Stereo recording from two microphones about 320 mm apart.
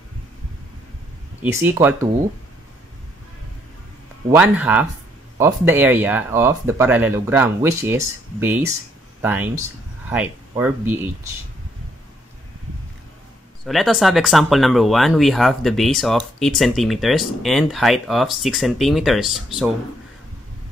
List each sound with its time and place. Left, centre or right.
1.4 s speech: centre
4.3 s speech: centre
13.7 s speech: centre